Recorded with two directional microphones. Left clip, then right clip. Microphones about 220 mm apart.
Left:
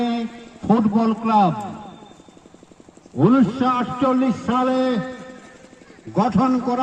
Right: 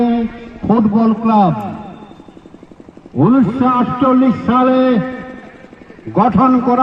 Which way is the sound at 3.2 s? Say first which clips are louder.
Right 4 dB; 40° right (ahead or behind).